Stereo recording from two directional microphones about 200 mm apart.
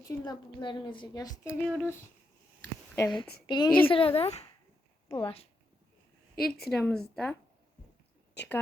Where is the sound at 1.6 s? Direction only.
10° left (ahead or behind).